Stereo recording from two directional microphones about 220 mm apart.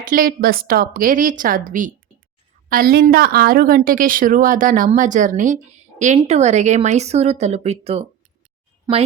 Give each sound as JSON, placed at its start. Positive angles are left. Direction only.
{"t": 0.1, "sound": "a woman's voice", "side_deg": -40}
{"t": 8.9, "sound": "a woman's voice", "side_deg": -15}